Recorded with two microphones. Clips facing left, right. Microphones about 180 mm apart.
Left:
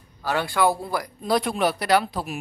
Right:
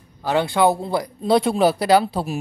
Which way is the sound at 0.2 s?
20° right (ahead or behind).